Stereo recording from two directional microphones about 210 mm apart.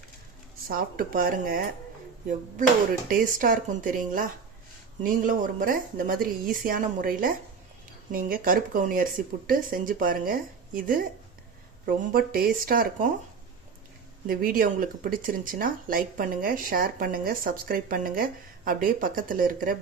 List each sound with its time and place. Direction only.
0.7 s speech: 45° right (ahead or behind)
3.1 s a woman's voice: 40° right (ahead or behind)
14.3 s speech: 45° right (ahead or behind)